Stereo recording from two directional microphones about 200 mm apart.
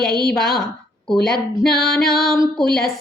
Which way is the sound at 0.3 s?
Centre (ahead or behind).